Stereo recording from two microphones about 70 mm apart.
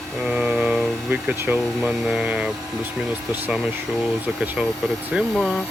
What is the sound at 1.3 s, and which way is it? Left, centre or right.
Speech, right.